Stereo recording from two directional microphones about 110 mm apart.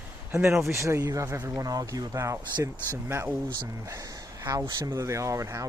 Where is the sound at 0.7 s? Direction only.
25° right (ahead or behind).